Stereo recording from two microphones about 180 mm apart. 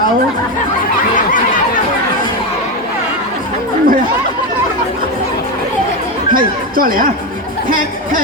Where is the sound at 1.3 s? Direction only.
50° left (ahead or behind).